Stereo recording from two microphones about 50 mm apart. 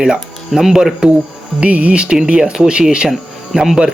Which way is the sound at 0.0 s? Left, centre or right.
Centre.